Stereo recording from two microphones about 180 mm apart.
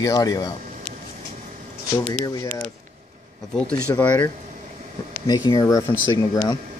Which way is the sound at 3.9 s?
10° left (ahead or behind).